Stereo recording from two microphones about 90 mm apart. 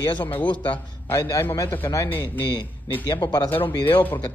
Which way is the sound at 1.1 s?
35° left (ahead or behind).